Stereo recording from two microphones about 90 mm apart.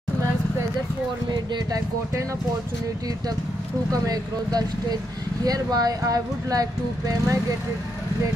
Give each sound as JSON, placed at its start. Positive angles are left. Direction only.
{"t": 1.3, "sound": "speech", "side_deg": -55}
{"t": 3.9, "sound": "speech", "side_deg": -45}